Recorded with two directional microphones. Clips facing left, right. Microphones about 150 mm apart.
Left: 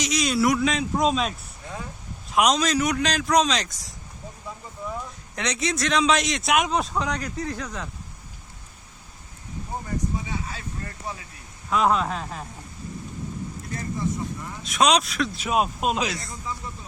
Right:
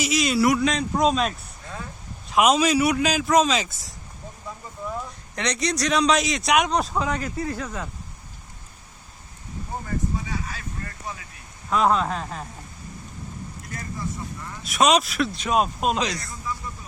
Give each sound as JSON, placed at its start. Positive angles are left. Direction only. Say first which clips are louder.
{"t": 0.0, "sound": "speech", "louder": "right 2 dB", "side_deg": -5}
{"t": 1.6, "sound": "a sound", "louder": "left 1 dB", "side_deg": 15}
{"t": 2.3, "sound": "speech", "louder": "right 2 dB", "side_deg": -5}
{"t": 10.2, "sound": "a sound", "louder": "even", "side_deg": 20}
{"t": 11.7, "sound": "speech", "louder": "right 1 dB", "side_deg": 0}
{"t": 13.7, "sound": "speech", "louder": "left 4 dB", "side_deg": 25}
{"t": 14.6, "sound": "speech", "louder": "right 1 dB", "side_deg": 0}
{"t": 16.2, "sound": "a man's voice", "louder": "right 1 dB", "side_deg": 20}